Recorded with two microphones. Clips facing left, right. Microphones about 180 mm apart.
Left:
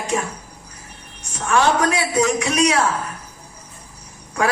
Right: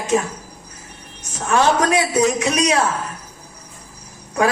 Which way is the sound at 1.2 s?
20° right (ahead or behind).